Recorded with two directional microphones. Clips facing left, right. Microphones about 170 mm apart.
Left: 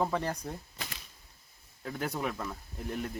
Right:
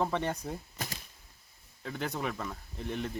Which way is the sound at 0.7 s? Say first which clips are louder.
Right 3 dB; 45° right (ahead or behind).